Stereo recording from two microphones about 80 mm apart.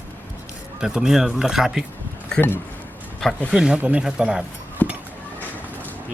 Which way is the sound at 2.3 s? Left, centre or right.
Left.